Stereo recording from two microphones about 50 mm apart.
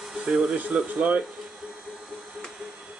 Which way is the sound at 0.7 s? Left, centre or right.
Right.